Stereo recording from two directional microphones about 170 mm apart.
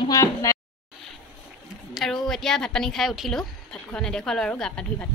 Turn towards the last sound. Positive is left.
turn(degrees=5)  # may be behind; listen again after turning